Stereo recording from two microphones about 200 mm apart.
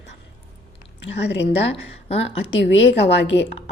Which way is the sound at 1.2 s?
60° left (ahead or behind).